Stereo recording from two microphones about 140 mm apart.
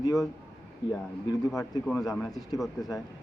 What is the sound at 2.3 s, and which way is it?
Speech, 25° left (ahead or behind).